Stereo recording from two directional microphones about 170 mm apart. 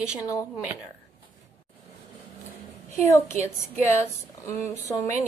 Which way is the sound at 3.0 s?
15° left (ahead or behind).